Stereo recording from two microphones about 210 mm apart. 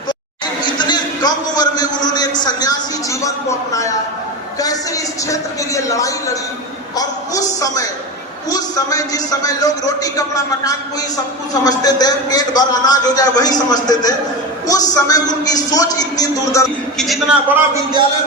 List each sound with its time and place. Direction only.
0.6 s a sound: 20° left (ahead or behind)
2.0 s a man's voice: 20° left (ahead or behind)
17.0 s a man's voice: centre (ahead or behind)